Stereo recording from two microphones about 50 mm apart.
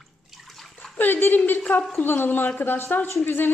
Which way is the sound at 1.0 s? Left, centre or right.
Left.